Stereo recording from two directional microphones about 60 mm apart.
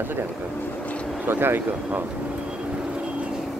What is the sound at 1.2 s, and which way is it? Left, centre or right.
Vehicle, right.